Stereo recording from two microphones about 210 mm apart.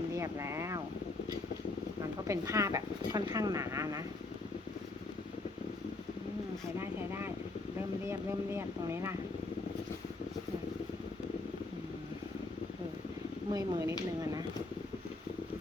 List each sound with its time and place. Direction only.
0.2 s speech: 15° right (ahead or behind)
2.2 s speech: 15° right (ahead or behind)
6.7 s speech: 10° right (ahead or behind)
13.5 s speech: 15° right (ahead or behind)